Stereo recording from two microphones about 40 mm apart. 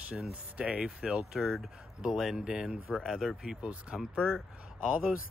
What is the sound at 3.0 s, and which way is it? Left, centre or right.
Speech, centre.